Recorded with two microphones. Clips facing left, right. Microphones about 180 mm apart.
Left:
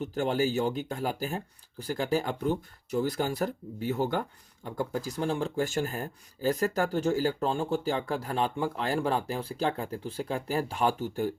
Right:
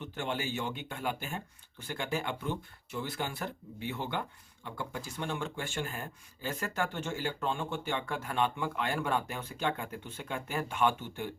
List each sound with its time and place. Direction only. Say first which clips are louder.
0.0 s speech: left 8 dB; 40° left (ahead or behind)